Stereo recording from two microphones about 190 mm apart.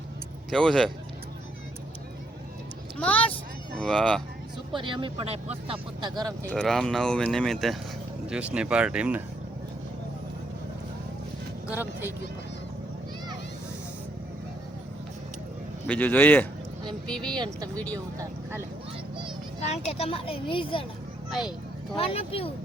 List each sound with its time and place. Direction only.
0.5 s speech: centre (ahead or behind)
3.0 s a man's voice: 5° left (ahead or behind)
4.7 s speech: 25° right (ahead or behind)
6.4 s speech: 5° left (ahead or behind)
11.7 s speech: 10° right (ahead or behind)
15.9 s a man's voice: 10° left (ahead or behind)
17.3 s speech: 25° right (ahead or behind)
17.7 s a man's voice: 10° left (ahead or behind)
19.5 s speech: 35° left (ahead or behind)
21.2 s a sound: centre (ahead or behind)
21.9 s speech: 30° left (ahead or behind)